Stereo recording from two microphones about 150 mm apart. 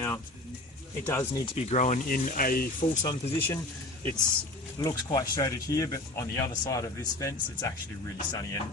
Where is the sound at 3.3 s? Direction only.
15° left (ahead or behind).